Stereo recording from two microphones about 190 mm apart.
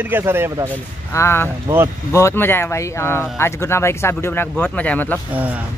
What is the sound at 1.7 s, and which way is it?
Speech, 15° right (ahead or behind).